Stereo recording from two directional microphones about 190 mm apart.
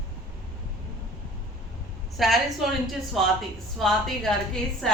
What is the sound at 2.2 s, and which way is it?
A woman's voice, centre (ahead or behind).